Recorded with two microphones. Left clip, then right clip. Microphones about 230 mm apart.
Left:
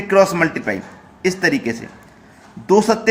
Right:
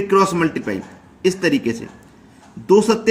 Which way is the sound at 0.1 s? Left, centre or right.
Centre.